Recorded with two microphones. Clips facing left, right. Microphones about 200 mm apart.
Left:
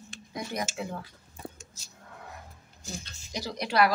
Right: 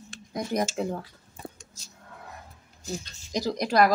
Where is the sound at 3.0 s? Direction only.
40° right (ahead or behind).